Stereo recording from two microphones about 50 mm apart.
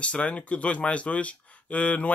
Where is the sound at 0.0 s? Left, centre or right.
Left.